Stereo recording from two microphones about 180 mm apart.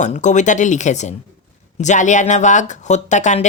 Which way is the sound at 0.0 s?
45° left (ahead or behind).